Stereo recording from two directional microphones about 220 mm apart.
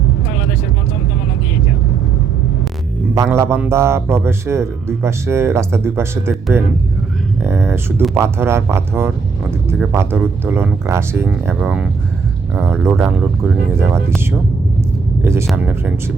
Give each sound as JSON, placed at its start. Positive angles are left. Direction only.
{"t": 3.2, "sound": "speech", "side_deg": -10}
{"t": 15.2, "sound": "speech", "side_deg": -10}